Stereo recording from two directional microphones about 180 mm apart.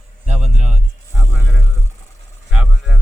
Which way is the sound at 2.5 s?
5° right (ahead or behind).